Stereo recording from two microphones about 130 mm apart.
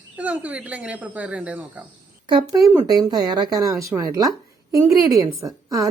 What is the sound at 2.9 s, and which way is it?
A woman's voice, 30° right (ahead or behind).